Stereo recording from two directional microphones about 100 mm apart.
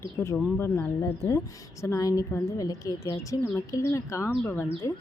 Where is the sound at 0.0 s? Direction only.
25° left (ahead or behind).